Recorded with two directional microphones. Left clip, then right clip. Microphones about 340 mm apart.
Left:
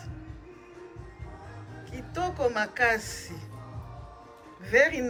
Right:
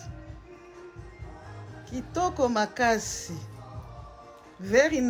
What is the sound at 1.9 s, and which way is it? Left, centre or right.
Speech, centre.